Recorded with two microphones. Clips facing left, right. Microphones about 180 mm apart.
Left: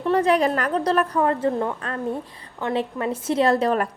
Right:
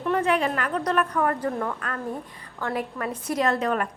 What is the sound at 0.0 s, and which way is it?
A woman's voice, 30° left (ahead or behind).